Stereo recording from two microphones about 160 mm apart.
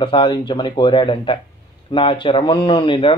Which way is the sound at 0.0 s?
30° left (ahead or behind).